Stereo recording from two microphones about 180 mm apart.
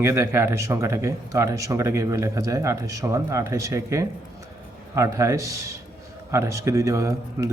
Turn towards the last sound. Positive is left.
turn(degrees=-15)  # may be behind; listen again after turning